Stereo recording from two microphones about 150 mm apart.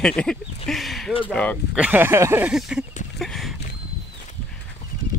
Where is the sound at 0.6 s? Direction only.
Centre (ahead or behind).